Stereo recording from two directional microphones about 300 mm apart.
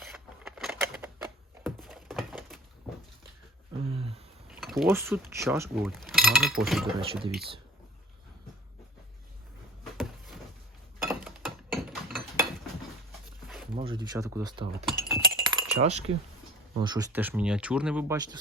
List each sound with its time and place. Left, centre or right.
0.0 s scissors: centre
1.6 s a sound: centre
3.8 s a sound: centre
4.4 s speech: centre
7.0 s speech: centre
11.1 s a sound: centre
13.7 s speech: centre
14.8 s speech: centre
15.4 s chink: centre
16.7 s speech: centre